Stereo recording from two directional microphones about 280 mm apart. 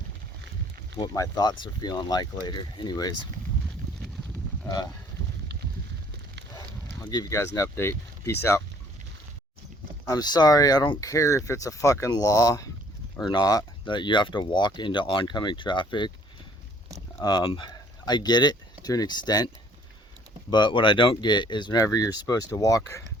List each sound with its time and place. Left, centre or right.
0.9 s speech: centre
7.0 s speech: centre
10.1 s speech: centre
17.2 s speech: centre
20.5 s speech: centre